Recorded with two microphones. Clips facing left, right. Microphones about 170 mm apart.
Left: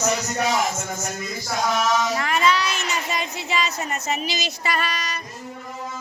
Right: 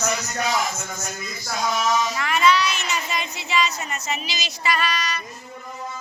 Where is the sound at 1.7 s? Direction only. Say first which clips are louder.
Even; 65° left (ahead or behind).